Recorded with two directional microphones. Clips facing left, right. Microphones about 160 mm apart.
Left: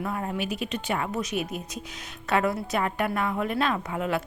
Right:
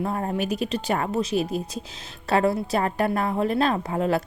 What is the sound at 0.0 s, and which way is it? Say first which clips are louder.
Speech: right 4 dB; 35° right (ahead or behind).